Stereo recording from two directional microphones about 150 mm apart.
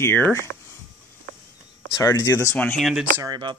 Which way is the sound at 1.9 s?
20° left (ahead or behind).